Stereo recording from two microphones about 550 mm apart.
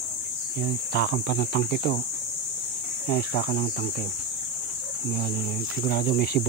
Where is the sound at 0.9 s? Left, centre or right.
Centre.